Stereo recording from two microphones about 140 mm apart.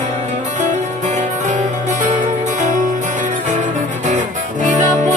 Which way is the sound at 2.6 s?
60° right (ahead or behind).